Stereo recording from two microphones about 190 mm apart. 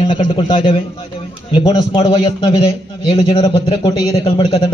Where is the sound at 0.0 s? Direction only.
25° left (ahead or behind).